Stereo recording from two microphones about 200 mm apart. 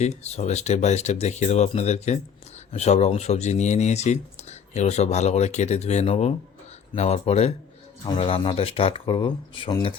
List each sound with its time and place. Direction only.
0.0 s speech: 35° left (ahead or behind)